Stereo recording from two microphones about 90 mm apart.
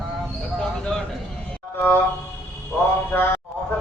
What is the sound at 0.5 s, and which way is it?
Bird, 10° left (ahead or behind).